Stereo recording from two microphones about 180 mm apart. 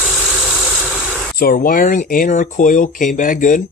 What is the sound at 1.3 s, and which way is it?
Speech, 55° left (ahead or behind).